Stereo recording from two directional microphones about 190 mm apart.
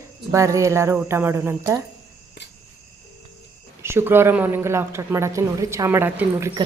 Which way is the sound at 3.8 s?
15° right (ahead or behind).